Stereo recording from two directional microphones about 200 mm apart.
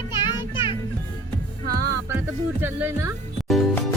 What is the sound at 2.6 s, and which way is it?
Speech, 10° right (ahead or behind).